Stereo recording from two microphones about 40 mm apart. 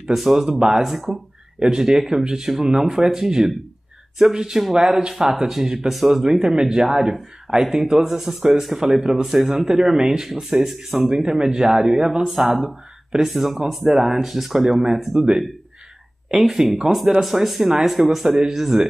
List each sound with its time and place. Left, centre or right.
0.0 s speech: centre
12.3 s speech: centre
16.3 s speech: centre